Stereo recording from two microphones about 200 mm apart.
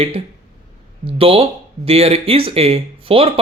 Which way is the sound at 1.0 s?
30° right (ahead or behind).